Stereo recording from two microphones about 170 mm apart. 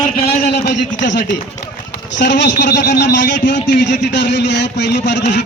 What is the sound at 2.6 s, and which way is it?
Speech, 50° left (ahead or behind).